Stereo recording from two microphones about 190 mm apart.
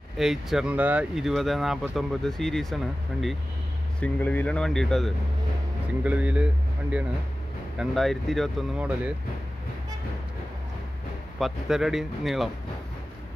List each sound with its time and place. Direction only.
0.2 s speech: centre (ahead or behind)
11.3 s speech: centre (ahead or behind)